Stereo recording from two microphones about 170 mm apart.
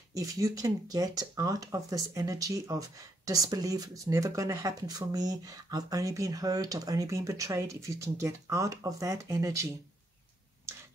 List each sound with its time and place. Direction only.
0.1 s speech: 20° right (ahead or behind)